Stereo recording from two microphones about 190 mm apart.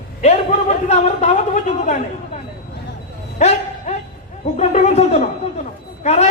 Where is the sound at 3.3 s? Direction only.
35° left (ahead or behind).